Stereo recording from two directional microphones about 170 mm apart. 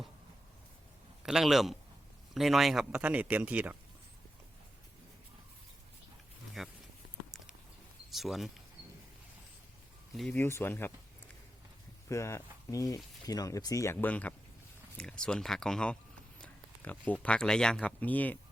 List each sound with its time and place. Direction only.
1.2 s a man's voice: centre (ahead or behind)
6.6 s speech: centre (ahead or behind)
7.3 s patter: centre (ahead or behind)
8.1 s speech: centre (ahead or behind)
10.2 s speech: 5° left (ahead or behind)
12.0 s speech: 15° left (ahead or behind)